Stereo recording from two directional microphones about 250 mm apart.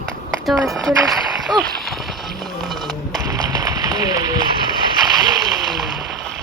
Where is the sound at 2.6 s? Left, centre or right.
Centre.